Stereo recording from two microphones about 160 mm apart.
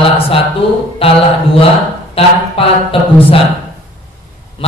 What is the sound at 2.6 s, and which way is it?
Speech, 35° left (ahead or behind).